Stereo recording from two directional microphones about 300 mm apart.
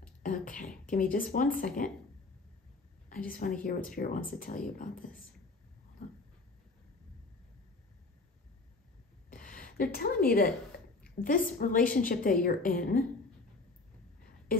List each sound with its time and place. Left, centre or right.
0.2 s a woman's voice: left
3.1 s a woman's voice: left
9.3 s gasp: left
11.0 s a sound: centre
11.2 s a woman's voice: left